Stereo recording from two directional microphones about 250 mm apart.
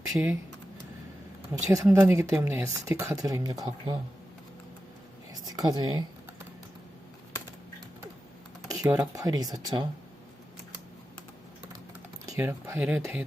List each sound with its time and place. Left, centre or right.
0.1 s speech: centre
1.7 s speech: centre
5.3 s speech: centre
8.6 s speech: centre
12.2 s speech: centre